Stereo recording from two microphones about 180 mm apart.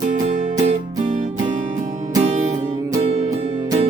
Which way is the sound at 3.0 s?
30° right (ahead or behind).